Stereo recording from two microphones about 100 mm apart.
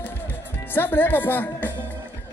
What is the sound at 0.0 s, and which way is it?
Music, 20° left (ahead or behind).